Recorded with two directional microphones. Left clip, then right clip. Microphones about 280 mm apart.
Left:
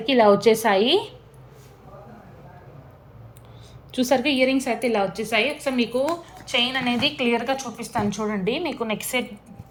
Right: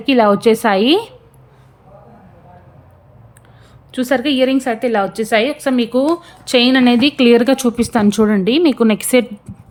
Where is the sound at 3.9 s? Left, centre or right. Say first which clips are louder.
Right 5 dB; centre.